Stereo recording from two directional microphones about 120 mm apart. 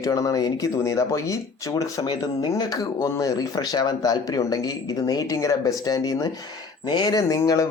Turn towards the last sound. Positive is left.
turn(degrees=25)  # may be behind; listen again after turning